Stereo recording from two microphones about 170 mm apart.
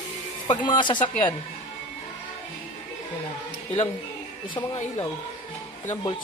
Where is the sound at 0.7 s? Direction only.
25° left (ahead or behind).